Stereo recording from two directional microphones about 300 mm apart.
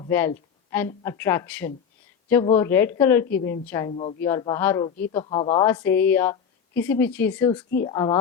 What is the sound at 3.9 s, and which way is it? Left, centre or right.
A woman's voice, left.